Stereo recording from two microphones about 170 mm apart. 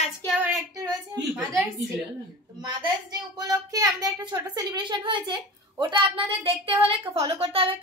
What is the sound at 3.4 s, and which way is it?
A woman's voice, 20° right (ahead or behind).